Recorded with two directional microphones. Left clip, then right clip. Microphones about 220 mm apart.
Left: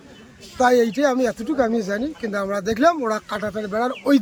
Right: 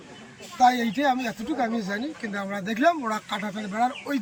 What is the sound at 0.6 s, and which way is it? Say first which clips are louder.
Speech: left 4 dB; 20° left (ahead or behind).